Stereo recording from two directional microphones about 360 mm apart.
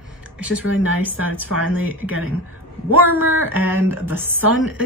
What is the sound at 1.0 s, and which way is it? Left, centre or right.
A woman's voice, centre.